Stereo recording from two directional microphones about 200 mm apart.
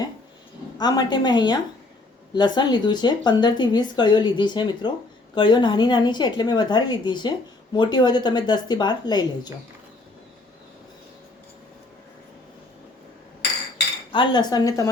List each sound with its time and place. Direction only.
0.8 s a woman's voice: 20° left (ahead or behind)
14.1 s a woman's voice: 25° left (ahead or behind)